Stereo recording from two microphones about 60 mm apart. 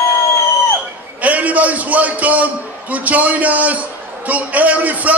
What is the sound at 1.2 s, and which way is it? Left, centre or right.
A man's voice, right.